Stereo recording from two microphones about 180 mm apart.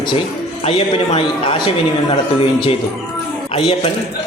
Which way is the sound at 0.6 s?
30° left (ahead or behind).